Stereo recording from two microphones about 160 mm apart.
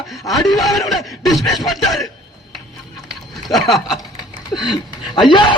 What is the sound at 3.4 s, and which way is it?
Speech, centre (ahead or behind).